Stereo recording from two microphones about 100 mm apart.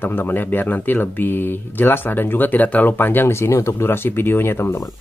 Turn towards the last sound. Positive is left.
turn(degrees=25)  # may be behind; listen again after turning